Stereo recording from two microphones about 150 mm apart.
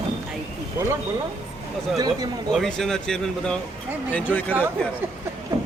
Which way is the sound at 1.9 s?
25° right (ahead or behind).